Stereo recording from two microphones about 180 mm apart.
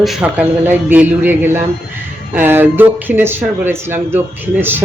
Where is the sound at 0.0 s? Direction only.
5° right (ahead or behind).